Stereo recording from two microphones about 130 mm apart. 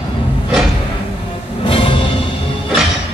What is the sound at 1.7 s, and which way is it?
Music, 40° left (ahead or behind).